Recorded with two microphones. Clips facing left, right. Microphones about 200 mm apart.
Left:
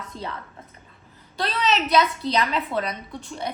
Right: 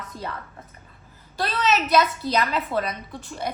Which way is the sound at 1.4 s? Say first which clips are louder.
Even; 5° right (ahead or behind).